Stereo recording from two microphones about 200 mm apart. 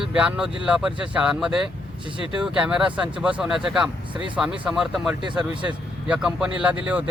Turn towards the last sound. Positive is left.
turn(degrees=-5)  # may be behind; listen again after turning